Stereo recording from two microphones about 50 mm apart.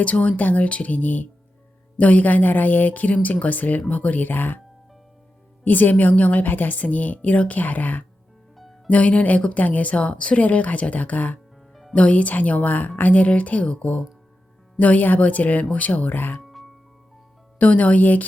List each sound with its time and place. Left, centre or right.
0.0 s a woman's voice: left
5.6 s a woman's voice: left
8.5 s music: centre
8.9 s a woman's voice: left
11.7 s music: centre
11.9 s a woman's voice: left
16.4 s music: centre
17.6 s a woman's voice: left